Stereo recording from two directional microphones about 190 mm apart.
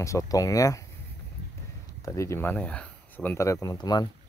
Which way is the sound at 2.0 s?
15° left (ahead or behind).